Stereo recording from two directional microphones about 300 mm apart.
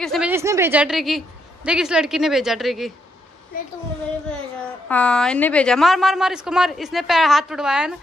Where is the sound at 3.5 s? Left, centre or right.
Left.